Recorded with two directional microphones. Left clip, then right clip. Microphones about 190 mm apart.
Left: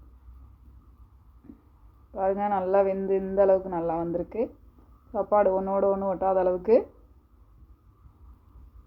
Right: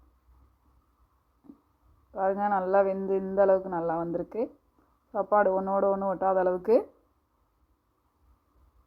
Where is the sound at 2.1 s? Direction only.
20° right (ahead or behind).